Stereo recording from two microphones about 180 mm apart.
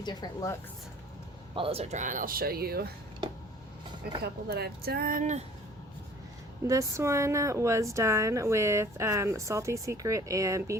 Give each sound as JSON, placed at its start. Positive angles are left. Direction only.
{"t": 0.0, "sound": "speech", "side_deg": 25}
{"t": 1.5, "sound": "speech", "side_deg": -30}
{"t": 4.2, "sound": "speech", "side_deg": -60}
{"t": 6.7, "sound": "speech", "side_deg": -15}